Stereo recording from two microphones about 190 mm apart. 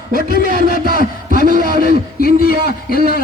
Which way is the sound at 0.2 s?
55° left (ahead or behind).